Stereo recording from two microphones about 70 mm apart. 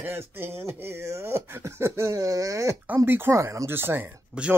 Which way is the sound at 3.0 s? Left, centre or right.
Right.